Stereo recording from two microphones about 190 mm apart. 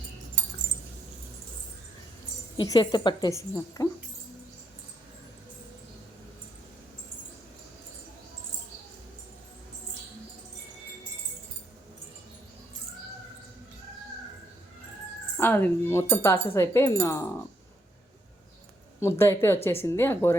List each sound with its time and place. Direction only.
2.6 s a woman's voice: 20° left (ahead or behind)
15.4 s speech: 10° left (ahead or behind)
18.9 s speech: 15° left (ahead or behind)